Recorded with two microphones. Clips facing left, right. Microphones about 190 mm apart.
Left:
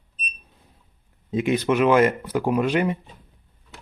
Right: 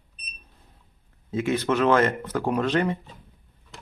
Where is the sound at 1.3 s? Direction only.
15° left (ahead or behind).